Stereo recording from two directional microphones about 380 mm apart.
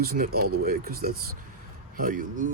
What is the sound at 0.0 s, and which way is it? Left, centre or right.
Speech, right.